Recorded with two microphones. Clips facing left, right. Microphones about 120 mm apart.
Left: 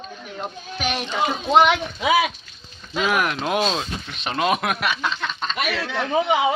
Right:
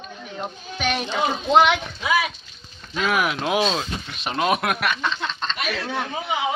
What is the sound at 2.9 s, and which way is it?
Speech, 5° left (ahead or behind).